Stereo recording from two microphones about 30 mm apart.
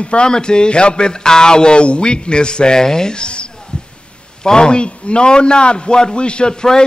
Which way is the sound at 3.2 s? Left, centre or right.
Left.